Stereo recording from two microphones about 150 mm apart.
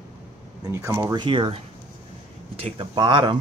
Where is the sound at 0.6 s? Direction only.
20° right (ahead or behind).